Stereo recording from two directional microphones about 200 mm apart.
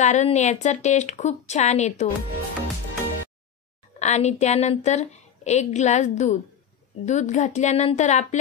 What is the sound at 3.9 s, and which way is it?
A woman's voice, 35° left (ahead or behind).